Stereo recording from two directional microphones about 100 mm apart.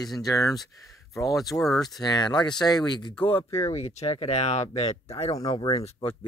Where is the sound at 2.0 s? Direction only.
45° left (ahead or behind).